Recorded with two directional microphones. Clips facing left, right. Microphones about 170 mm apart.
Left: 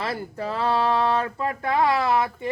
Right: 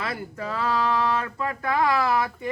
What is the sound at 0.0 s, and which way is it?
Speech, 30° left (ahead or behind).